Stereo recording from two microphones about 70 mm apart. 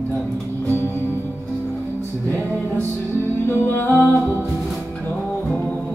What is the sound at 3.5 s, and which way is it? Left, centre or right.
Music, left.